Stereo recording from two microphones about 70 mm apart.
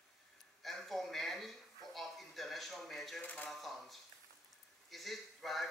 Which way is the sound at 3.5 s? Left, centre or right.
Centre.